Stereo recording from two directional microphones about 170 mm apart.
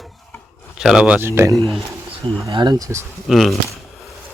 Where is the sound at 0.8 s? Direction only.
5° right (ahead or behind).